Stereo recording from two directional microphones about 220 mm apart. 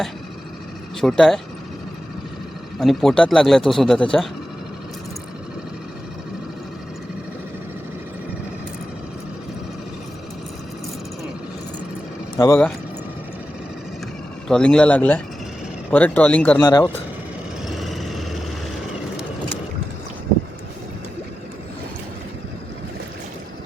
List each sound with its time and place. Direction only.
1.0 s speech: centre (ahead or behind)
2.7 s speech: centre (ahead or behind)
12.4 s speech: 10° left (ahead or behind)
14.4 s speech: 5° left (ahead or behind)
16.6 s speech: 20° left (ahead or behind)
17.7 s vehicle: centre (ahead or behind)